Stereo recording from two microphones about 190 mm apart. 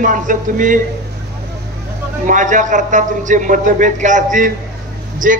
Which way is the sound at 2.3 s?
40° right (ahead or behind).